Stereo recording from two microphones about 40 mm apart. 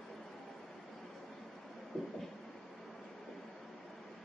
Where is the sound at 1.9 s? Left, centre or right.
Centre.